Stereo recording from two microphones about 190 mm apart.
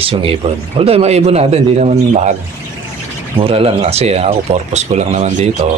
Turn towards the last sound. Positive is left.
turn(degrees=-35)  # may be behind; listen again after turning